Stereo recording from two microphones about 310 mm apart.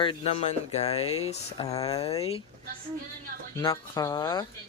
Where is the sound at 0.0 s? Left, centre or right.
Centre.